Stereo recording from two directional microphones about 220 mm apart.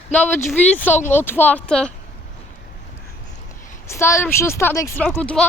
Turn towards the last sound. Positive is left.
turn(degrees=5)  # may be behind; listen again after turning